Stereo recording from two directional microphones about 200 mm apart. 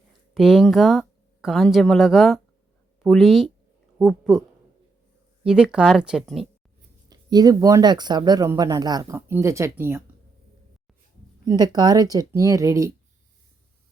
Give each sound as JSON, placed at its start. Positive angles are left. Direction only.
{"t": 0.3, "sound": "speech", "side_deg": 0}
{"t": 7.1, "sound": "speech", "side_deg": -20}
{"t": 11.4, "sound": "speech", "side_deg": -20}